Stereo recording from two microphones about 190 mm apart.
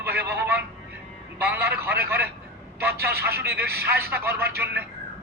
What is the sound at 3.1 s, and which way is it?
Speech, 55° right (ahead or behind).